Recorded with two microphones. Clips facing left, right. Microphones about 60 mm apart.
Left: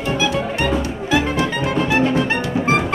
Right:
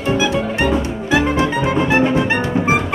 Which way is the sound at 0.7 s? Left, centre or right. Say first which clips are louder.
Right 2 dB; centre.